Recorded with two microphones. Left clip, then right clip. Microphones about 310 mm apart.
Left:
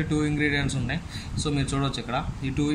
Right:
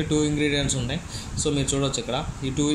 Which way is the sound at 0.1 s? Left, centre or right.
Left.